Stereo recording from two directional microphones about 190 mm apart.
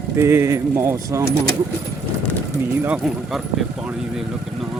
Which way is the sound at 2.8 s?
5° right (ahead or behind).